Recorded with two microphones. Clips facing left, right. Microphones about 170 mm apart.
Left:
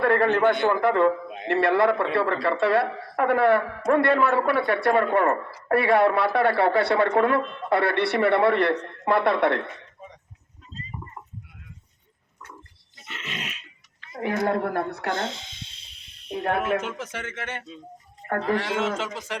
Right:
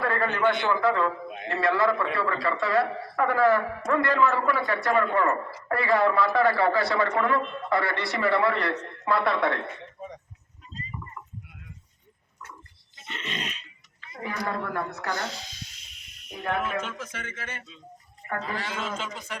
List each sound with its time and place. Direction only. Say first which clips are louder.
0.0 s a woman's voice: left 5 dB; 60° left (ahead or behind)
13.1 s grunt: right 1 dB; 5° left (ahead or behind)
14.2 s a woman's voice: left 7 dB; 65° left (ahead or behind)
15.1 s a sound: left 3 dB; 25° left (ahead or behind)
16.6 s a man's voice: left 5 dB; 75° left (ahead or behind)